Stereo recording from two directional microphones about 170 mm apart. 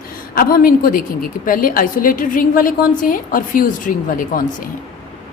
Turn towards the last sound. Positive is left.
turn(degrees=55)  # may be behind; listen again after turning